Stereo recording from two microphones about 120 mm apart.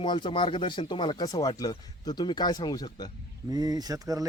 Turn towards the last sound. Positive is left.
turn(degrees=-30)  # may be behind; listen again after turning